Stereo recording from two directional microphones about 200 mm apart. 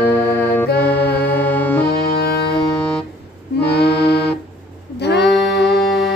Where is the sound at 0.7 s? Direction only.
10° left (ahead or behind).